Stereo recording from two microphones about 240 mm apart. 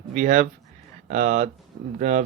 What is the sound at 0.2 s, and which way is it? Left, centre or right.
Speech, right.